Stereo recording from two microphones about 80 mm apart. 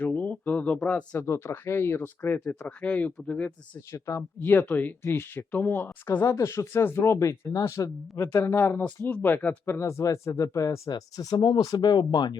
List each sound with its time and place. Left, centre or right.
0.0 s a sound: left
1.2 s speech: left; by 3.5 s centre
3.8 s speech: left
4.4 s speech: left
6.2 s speech: left
10.8 s speech: left